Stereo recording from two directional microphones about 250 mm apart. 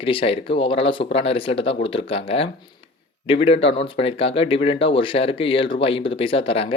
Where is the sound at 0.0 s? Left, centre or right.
Left.